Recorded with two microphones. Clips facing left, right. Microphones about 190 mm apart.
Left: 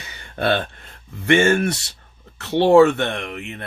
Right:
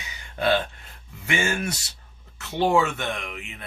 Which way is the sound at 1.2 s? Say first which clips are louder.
Left 10 dB; 55° left (ahead or behind).